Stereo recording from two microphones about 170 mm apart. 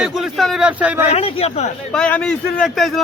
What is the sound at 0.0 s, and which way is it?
Speech, centre (ahead or behind).